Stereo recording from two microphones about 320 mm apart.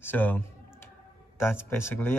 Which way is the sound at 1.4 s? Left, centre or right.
Centre.